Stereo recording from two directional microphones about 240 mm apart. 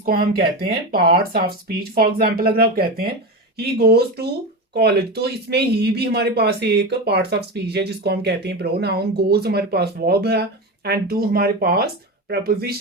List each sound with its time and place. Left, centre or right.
0.0 s speech: right